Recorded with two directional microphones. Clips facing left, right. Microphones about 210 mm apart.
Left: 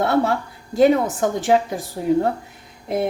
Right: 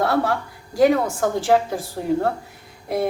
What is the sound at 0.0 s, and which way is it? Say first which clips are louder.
A woman's voice: left 2 dB; 25° left (ahead or behind).